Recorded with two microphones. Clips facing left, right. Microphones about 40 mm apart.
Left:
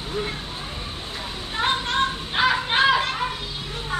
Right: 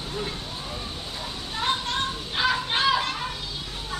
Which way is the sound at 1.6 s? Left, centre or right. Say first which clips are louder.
Left 4 dB; left.